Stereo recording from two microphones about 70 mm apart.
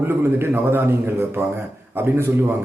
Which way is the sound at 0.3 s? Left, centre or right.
Right.